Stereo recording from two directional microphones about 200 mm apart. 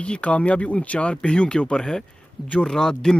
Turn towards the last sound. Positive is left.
turn(degrees=5)  # may be behind; listen again after turning